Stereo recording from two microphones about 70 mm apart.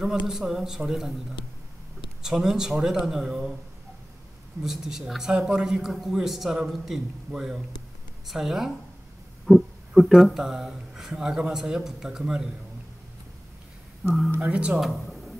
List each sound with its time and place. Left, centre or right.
0.0 s a man's voice: centre
2.2 s a man's voice: centre
4.6 s a man's voice: centre
14.4 s speech: centre
14.8 s a sound: centre